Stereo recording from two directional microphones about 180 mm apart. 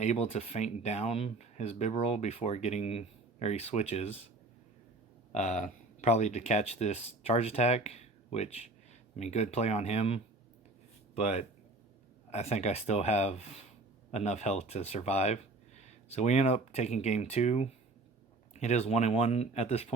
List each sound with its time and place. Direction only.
0.0 s speech: 40° left (ahead or behind)
5.3 s speech: 40° left (ahead or behind)